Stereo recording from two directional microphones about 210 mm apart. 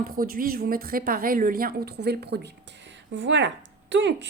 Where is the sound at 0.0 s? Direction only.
45° right (ahead or behind).